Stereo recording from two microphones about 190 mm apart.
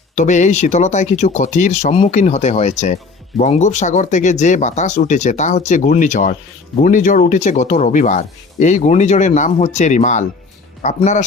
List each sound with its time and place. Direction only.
0.2 s speech: 40° left (ahead or behind)